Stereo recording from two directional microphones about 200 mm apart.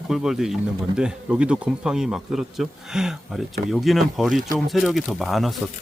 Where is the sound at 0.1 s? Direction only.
Centre (ahead or behind).